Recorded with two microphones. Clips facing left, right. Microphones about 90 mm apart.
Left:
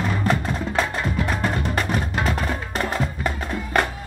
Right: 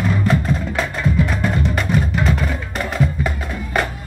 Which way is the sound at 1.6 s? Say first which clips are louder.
Right 4 dB; 40° left (ahead or behind).